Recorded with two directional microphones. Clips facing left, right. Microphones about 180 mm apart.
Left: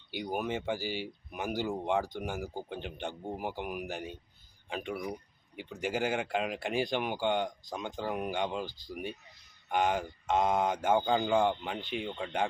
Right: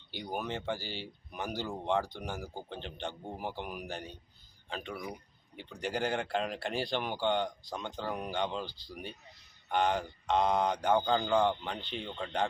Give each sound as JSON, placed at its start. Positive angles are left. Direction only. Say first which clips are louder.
{"t": 0.1, "sound": "speech", "louder": "left 3 dB", "side_deg": 10}
{"t": 8.6, "sound": "speech", "louder": "left 3 dB", "side_deg": 45}
{"t": 9.7, "sound": "speech", "louder": "left 1 dB", "side_deg": 5}